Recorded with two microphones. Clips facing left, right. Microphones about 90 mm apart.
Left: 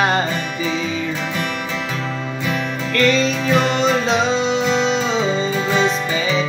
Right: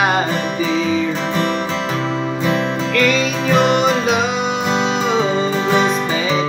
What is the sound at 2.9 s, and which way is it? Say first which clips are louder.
Music: left 1 dB; 10° right (ahead or behind).